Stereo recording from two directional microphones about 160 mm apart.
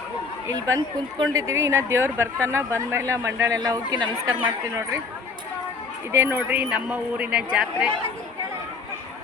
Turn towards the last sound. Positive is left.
turn(degrees=-5)  # may be behind; listen again after turning